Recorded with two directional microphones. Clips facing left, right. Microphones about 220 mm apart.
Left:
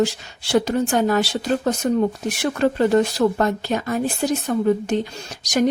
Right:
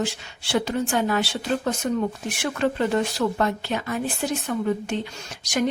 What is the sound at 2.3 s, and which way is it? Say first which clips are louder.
Speech: left 4 dB; 40° left (ahead or behind).